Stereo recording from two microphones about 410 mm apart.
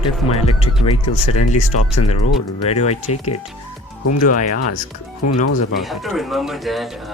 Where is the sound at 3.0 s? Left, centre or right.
Left.